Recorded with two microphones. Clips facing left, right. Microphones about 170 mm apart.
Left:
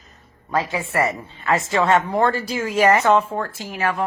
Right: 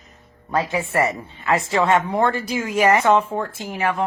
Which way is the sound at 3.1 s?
10° right (ahead or behind).